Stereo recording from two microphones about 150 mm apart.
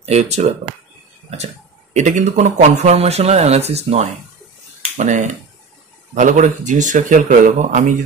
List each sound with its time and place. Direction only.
0.0 s speech: 45° right (ahead or behind)
2.0 s speech: 50° right (ahead or behind)